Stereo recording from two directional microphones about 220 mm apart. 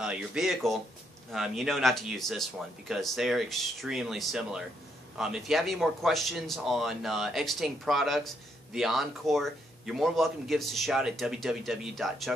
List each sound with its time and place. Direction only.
0.0 s speech: 5° right (ahead or behind)